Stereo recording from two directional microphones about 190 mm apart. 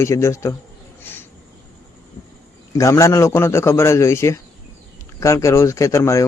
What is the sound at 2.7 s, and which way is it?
A man's voice, 15° left (ahead or behind).